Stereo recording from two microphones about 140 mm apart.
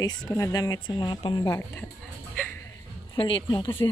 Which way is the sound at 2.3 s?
10° left (ahead or behind).